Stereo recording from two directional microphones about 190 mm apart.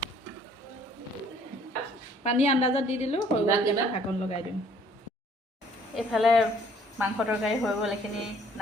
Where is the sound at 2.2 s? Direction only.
35° left (ahead or behind).